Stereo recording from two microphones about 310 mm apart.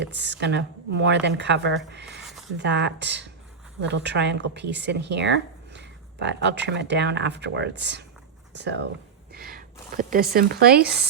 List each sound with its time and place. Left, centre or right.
0.0 s speech: right
9.3 s a sound: right
10.3 s speech: right